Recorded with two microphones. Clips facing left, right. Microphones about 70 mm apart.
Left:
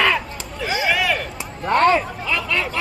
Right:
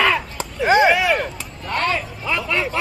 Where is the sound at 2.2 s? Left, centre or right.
Centre.